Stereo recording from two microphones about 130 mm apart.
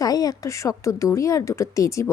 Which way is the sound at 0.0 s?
30° left (ahead or behind).